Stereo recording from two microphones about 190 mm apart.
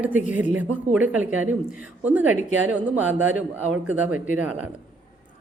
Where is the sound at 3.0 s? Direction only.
90° right.